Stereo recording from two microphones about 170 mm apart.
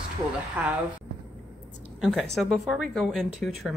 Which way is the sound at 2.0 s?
Centre (ahead or behind).